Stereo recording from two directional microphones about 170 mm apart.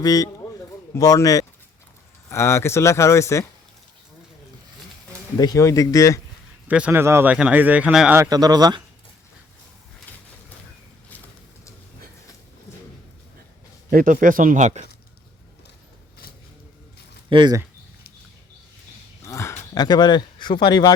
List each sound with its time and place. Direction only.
0.0 s speech: 20° left (ahead or behind)
5.4 s speech: 20° left (ahead or behind)
6.7 s speech: 5° right (ahead or behind)
8.2 s speech: 25° right (ahead or behind)
13.9 s speech: 55° right (ahead or behind)
17.2 s speech: 25° right (ahead or behind)
19.2 s speech: 15° left (ahead or behind)